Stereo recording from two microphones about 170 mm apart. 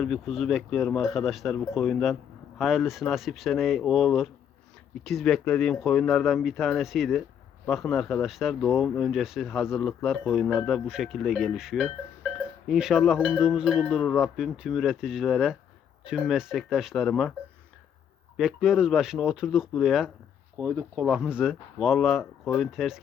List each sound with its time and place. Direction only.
0.0 s speech: centre (ahead or behind)
18.3 s speech: centre (ahead or behind)
20.6 s speech: 15° right (ahead or behind)
21.1 s speech: 5° right (ahead or behind)